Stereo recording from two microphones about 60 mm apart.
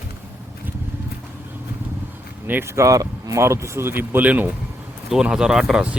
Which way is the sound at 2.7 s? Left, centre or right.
Right.